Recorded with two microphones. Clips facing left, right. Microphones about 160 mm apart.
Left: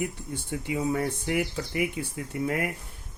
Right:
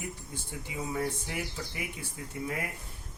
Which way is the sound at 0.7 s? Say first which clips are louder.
Left 6 dB; 65° left (ahead or behind).